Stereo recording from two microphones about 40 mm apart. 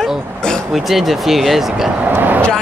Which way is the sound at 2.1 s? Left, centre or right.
Right.